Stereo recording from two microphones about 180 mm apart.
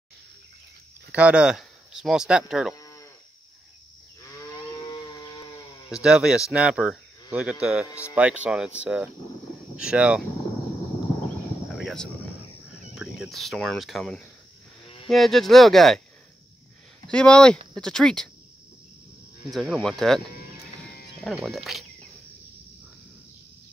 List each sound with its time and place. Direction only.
1.1 s speech: 5° right (ahead or behind)
2.7 s moo: 20° left (ahead or behind)
4.2 s cattle: 20° left (ahead or behind)
6.0 s speech: 5° right (ahead or behind)
11.8 s speech: centre (ahead or behind)
17.1 s speech: 5° left (ahead or behind)
19.5 s speech: centre (ahead or behind)
21.4 s speech: centre (ahead or behind)